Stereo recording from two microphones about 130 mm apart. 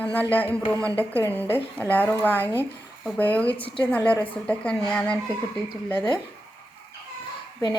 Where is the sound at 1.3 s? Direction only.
15° left (ahead or behind).